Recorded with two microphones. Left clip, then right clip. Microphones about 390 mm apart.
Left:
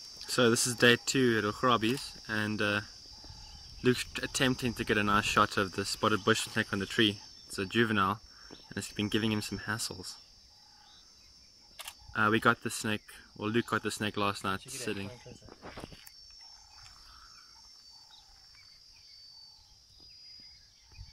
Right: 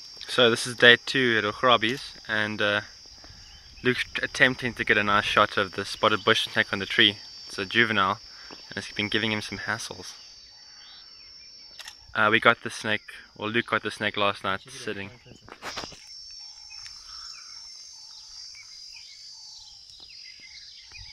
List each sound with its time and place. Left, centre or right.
0.2 s speech: centre
3.8 s speech: centre
12.1 s speech: centre
15.6 s cricket: right